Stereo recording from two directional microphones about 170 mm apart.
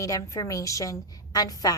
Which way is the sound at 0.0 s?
20° left (ahead or behind).